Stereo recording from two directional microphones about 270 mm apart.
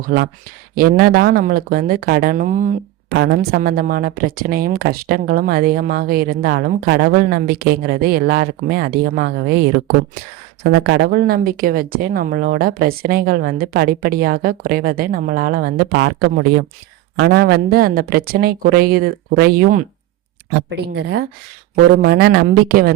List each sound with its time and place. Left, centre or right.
0.0 s speech: right
3.1 s speech: right
10.6 s speech: right